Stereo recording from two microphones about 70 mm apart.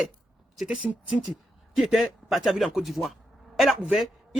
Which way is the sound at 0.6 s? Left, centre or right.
Centre.